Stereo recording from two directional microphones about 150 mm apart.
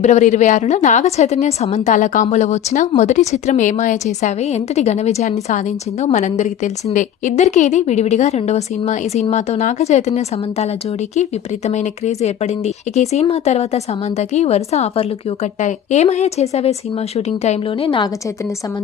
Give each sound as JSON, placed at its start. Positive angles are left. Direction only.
{"t": 0.0, "sound": "a woman's voice", "side_deg": 50}